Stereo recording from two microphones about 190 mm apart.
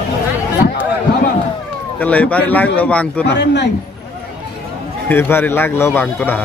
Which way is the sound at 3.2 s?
65° left (ahead or behind).